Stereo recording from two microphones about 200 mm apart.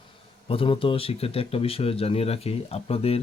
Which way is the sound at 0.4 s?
25° left (ahead or behind).